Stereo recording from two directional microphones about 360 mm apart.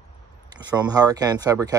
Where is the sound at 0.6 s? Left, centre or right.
Centre.